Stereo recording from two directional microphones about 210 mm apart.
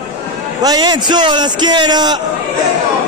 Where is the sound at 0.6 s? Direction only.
20° right (ahead or behind).